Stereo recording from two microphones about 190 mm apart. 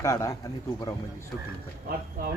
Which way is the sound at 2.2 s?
45° right (ahead or behind).